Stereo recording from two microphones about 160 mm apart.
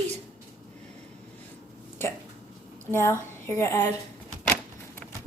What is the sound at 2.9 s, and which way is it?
Speech, 15° left (ahead or behind).